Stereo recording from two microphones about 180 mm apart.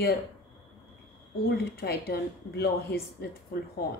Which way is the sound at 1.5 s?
60° left (ahead or behind).